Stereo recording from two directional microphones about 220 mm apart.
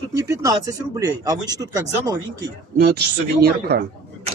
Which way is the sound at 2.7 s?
45° right (ahead or behind).